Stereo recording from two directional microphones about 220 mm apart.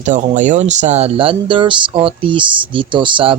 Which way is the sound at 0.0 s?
35° right (ahead or behind).